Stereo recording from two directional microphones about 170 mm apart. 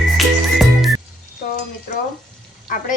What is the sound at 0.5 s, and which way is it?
Music, centre (ahead or behind).